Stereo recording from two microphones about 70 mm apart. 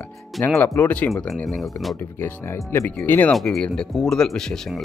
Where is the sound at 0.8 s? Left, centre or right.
Centre.